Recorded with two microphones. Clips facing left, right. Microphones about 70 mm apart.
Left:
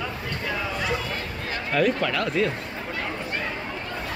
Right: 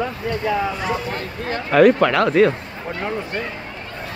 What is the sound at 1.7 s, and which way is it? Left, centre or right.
Speech, right.